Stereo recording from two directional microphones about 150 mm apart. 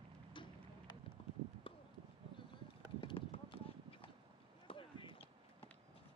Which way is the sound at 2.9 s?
40° left (ahead or behind).